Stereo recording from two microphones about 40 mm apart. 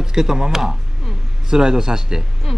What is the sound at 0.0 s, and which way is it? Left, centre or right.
A man's voice, centre.